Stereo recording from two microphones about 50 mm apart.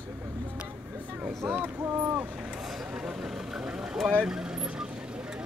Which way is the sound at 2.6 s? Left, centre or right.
Centre.